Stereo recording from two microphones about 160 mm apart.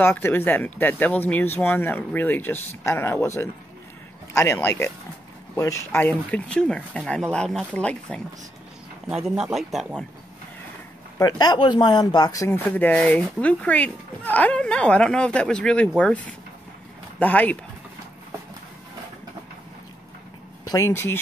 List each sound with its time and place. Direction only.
0.0 s speech: 15° left (ahead or behind)
9.1 s speech: 5° right (ahead or behind)
11.1 s speech: 25° left (ahead or behind)
12.6 s speech: 10° left (ahead or behind)
20.7 s speech: 15° left (ahead or behind)